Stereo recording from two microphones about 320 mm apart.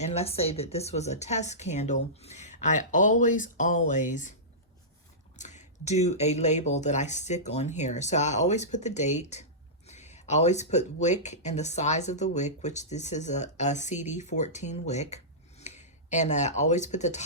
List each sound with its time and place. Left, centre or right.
0.0 s speech: centre
5.4 s speech: left